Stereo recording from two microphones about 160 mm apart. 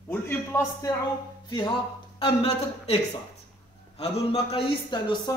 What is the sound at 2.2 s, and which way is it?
Speech, 35° left (ahead or behind).